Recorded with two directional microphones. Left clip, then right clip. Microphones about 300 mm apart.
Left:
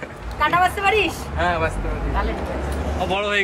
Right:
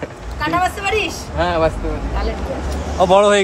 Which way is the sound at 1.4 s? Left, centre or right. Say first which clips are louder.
Right 4 dB; right.